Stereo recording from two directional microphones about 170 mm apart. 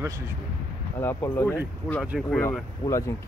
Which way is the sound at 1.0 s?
15° left (ahead or behind).